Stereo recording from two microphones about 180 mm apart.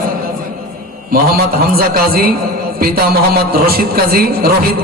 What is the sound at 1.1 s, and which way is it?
A man's voice, 55° right (ahead or behind).